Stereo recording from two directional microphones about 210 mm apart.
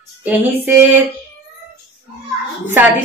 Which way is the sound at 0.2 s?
10° right (ahead or behind).